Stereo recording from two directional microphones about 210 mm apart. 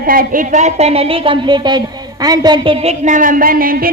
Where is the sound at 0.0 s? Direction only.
45° right (ahead or behind).